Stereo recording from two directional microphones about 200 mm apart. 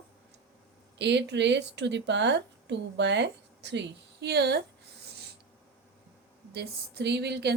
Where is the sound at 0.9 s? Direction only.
60° right (ahead or behind).